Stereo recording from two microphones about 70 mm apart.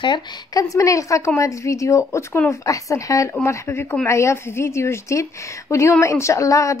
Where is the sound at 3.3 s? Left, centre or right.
Left.